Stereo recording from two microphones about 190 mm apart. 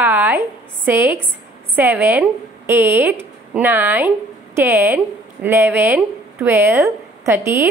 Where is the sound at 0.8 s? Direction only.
10° right (ahead or behind).